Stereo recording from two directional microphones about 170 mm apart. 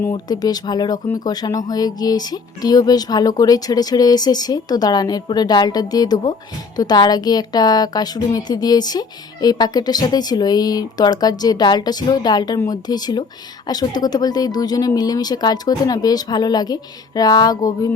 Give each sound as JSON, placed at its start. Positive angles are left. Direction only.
{"t": 0.0, "sound": "a woman's voice", "side_deg": 20}